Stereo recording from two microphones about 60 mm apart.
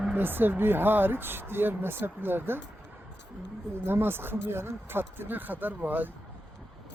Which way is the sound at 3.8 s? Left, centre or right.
Right.